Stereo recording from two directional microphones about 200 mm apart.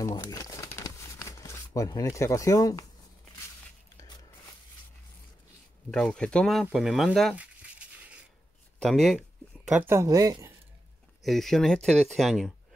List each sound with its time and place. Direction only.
0.0 s crumpling: 20° left (ahead or behind)
5.9 s speech: 5° left (ahead or behind)
9.7 s speech: 10° right (ahead or behind)
11.2 s speech: centre (ahead or behind)